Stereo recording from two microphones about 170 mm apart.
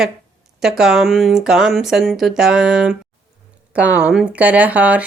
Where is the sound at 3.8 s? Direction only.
10° right (ahead or behind).